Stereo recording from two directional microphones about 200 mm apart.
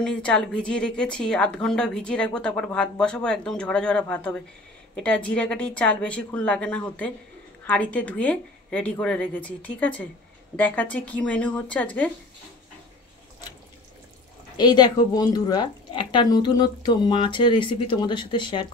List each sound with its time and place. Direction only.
0.0 s a woman's voice: 5° left (ahead or behind)
14.6 s speech: 20° left (ahead or behind)